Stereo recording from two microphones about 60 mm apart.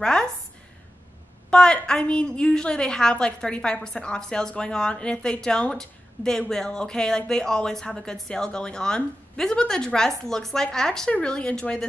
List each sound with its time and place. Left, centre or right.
0.0 s a woman's voice: centre
1.5 s a woman's voice: centre